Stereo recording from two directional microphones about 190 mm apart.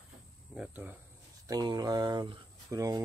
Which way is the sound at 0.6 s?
10° right (ahead or behind).